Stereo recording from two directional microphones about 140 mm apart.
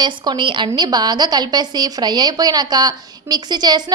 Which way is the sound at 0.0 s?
30° right (ahead or behind).